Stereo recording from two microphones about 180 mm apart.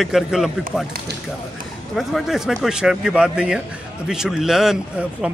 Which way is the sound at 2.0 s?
Centre (ahead or behind).